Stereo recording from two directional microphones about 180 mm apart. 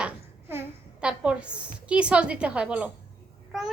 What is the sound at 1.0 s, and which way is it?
A woman's voice, 5° right (ahead or behind).